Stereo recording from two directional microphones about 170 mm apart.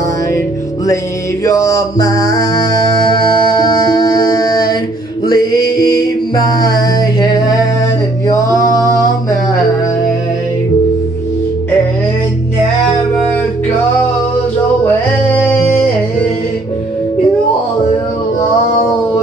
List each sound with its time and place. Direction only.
1.4 s mantra: 20° left (ahead or behind)
3.1 s music: 25° left (ahead or behind)